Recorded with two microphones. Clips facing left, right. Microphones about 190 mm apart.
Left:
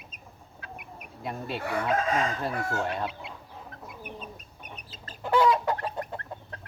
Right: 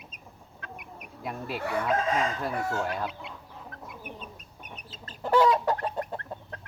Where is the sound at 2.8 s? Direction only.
Centre (ahead or behind).